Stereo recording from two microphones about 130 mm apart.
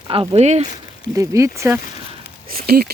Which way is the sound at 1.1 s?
25° right (ahead or behind).